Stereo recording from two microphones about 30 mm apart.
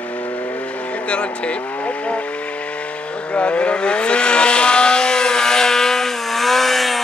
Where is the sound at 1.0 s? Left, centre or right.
Left.